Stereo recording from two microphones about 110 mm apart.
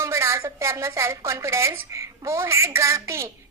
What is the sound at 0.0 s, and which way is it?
A woman's voice, 25° right (ahead or behind).